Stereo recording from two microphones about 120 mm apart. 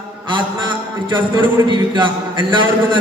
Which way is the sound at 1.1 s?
40° right (ahead or behind).